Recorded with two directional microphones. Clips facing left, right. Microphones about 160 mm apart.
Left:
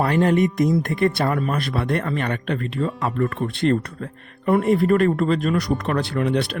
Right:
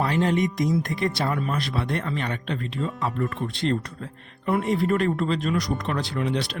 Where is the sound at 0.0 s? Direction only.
55° left (ahead or behind).